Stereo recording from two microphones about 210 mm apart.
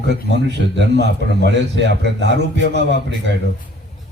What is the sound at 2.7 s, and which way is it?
Speech, 55° right (ahead or behind).